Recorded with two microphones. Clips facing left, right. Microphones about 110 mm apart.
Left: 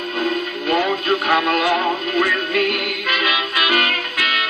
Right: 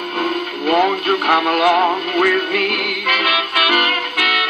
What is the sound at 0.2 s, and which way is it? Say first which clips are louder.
Radio: right 2 dB; 50° right (ahead or behind).